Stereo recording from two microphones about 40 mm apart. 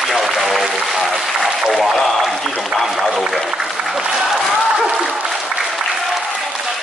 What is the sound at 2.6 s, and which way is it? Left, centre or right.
A man's voice, centre.